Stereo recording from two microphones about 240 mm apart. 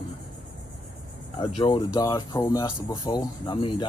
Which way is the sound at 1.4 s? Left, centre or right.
Left.